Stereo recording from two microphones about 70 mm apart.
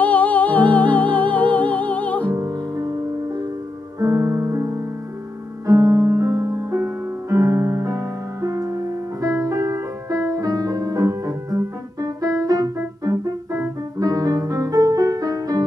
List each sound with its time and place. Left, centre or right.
0.0 s music: left
2.3 s music: right
4.0 s music: right